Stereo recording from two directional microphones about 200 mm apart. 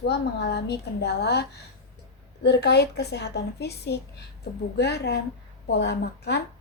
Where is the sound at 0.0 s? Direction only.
55° left (ahead or behind).